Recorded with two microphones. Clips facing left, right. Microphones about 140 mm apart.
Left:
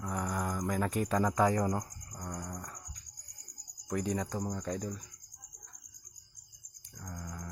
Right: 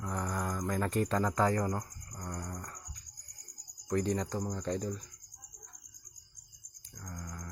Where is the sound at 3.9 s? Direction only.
10° left (ahead or behind).